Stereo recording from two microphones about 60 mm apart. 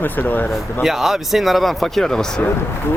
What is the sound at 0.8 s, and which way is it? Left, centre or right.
A man's voice, centre.